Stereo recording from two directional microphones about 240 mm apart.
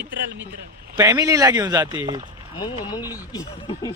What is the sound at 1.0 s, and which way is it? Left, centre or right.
Speech, centre.